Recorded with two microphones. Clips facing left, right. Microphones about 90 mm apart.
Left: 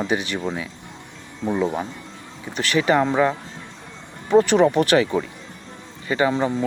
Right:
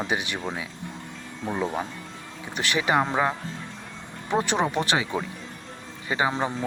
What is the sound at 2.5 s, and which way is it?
Speech, 15° right (ahead or behind).